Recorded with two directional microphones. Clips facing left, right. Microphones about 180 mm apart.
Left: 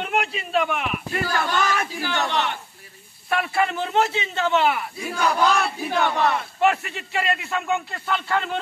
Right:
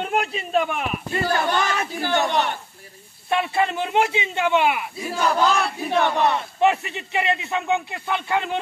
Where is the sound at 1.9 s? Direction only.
50° right (ahead or behind).